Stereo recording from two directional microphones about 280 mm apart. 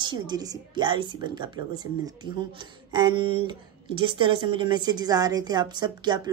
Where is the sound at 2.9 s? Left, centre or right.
Centre.